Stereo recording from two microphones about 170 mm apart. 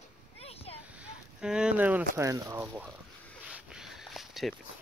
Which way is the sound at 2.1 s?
20° right (ahead or behind).